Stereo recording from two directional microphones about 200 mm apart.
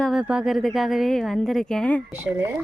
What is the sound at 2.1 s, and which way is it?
Speech, 10° right (ahead or behind).